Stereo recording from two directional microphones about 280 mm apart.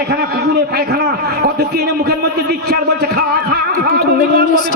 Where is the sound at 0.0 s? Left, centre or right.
Right.